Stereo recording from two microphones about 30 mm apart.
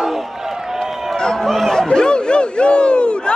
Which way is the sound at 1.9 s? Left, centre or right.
Left.